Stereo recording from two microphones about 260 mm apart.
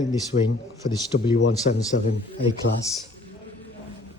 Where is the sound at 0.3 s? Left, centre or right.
Left.